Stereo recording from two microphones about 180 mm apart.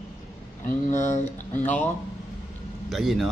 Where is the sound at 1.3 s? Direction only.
10° left (ahead or behind).